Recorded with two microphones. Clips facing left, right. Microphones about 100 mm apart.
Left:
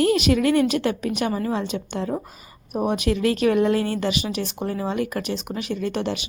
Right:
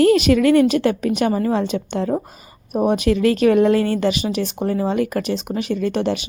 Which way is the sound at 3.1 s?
45° right (ahead or behind).